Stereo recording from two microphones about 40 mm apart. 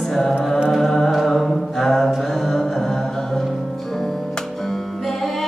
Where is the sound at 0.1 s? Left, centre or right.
Centre.